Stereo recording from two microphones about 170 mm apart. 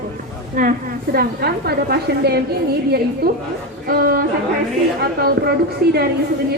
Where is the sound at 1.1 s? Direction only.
65° right (ahead or behind).